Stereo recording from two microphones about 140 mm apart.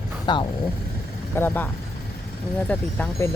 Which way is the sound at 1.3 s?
15° left (ahead or behind).